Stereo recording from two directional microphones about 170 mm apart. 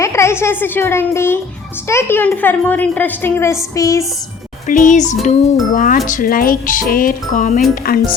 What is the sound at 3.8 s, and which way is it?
Music, 20° left (ahead or behind).